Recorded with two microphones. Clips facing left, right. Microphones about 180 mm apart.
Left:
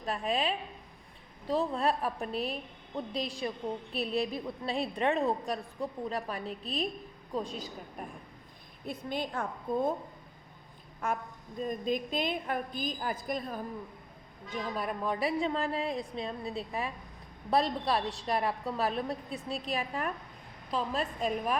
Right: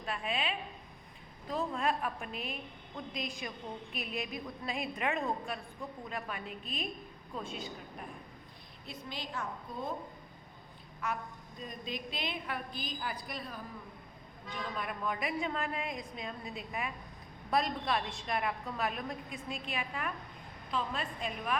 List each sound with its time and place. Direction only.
0.0 s a woman's voice: 40° left (ahead or behind)
8.9 s a woman's voice: 55° left (ahead or behind)
11.0 s a woman's voice: 50° left (ahead or behind)